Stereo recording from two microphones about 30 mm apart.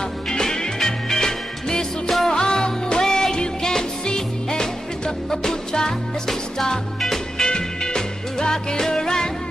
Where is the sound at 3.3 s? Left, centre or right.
Left; by 7.2 s centre.